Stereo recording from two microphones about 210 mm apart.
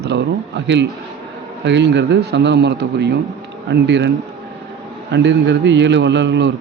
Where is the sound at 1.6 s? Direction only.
55° right (ahead or behind).